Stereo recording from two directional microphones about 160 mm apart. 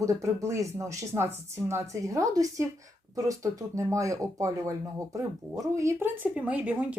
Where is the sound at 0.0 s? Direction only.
20° right (ahead or behind).